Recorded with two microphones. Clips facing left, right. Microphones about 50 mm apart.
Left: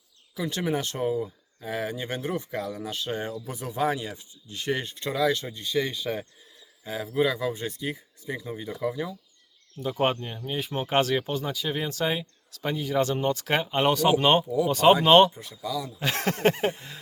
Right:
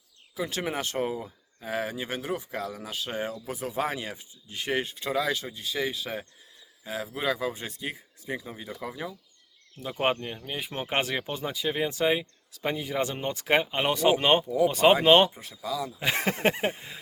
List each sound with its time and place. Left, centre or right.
0.3 s speech: right
7.3 s speech: right
15.9 s speech: centre